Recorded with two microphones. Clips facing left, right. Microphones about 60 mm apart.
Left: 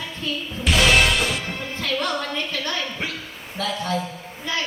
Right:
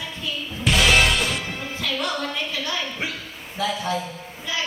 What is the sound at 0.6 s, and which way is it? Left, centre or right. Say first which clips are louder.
Music: left 1 dB; centre.